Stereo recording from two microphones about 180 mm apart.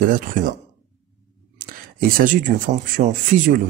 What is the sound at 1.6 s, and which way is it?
Speech, 50° right (ahead or behind).